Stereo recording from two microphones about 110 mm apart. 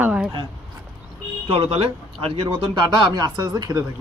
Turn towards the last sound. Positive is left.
turn(degrees=-35)  # may be behind; listen again after turning